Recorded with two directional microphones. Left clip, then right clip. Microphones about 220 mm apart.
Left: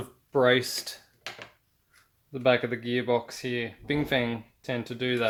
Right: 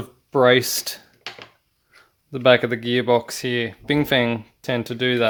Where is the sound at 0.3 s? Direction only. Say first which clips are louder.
Right 7 dB; 45° right (ahead or behind).